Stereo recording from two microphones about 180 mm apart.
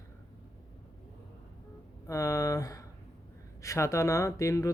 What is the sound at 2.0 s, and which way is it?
Speech, 20° left (ahead or behind).